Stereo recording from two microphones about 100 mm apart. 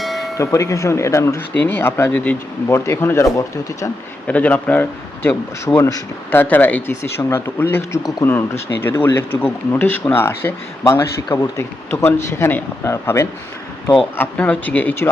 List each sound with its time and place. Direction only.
0.0 s bell: centre (ahead or behind)
0.3 s speech: 30° left (ahead or behind)
4.3 s a man's voice: 15° left (ahead or behind)
14.2 s a man's voice: 15° left (ahead or behind)